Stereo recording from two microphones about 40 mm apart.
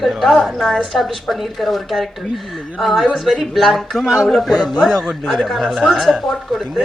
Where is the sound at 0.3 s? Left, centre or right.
Centre.